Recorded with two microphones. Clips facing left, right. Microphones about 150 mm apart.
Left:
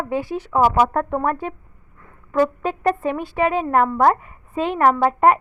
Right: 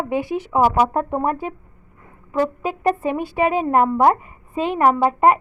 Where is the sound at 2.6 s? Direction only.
10° right (ahead or behind).